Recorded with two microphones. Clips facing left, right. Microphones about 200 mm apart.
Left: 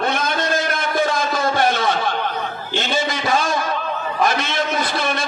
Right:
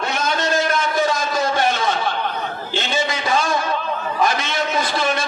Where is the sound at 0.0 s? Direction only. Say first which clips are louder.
Left 1 dB; 50° left (ahead or behind).